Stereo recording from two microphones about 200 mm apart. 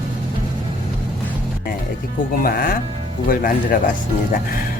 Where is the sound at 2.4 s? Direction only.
45° left (ahead or behind).